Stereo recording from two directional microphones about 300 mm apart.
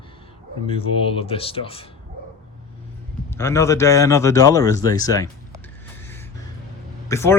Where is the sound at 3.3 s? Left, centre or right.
Centre.